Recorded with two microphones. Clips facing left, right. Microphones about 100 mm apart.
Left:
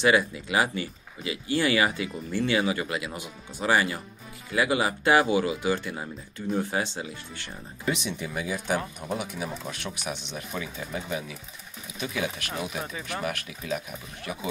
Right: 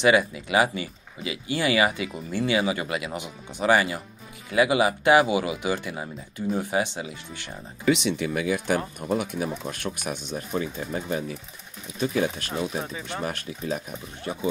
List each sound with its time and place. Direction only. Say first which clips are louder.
0.0 s speech: right 2 dB; 20° right (ahead or behind)
7.8 s speech: right 7 dB; 80° right; by 8.8 s 60° right (ahead or behind)
9.1 s speech: right 6 dB; 50° right (ahead or behind); by 14.5 s 30° right (ahead or behind)